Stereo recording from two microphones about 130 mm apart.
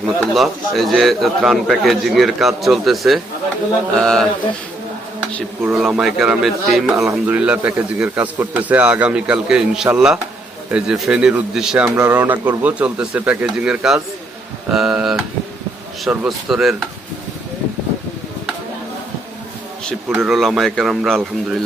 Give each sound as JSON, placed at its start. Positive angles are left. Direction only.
{"t": 0.0, "sound": "speech", "side_deg": 0}
{"t": 5.7, "sound": "a man's voice", "side_deg": -5}
{"t": 20.1, "sound": "speech", "side_deg": -5}